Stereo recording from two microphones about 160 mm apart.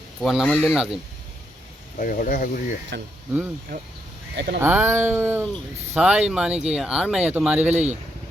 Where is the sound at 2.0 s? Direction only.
60° left (ahead or behind).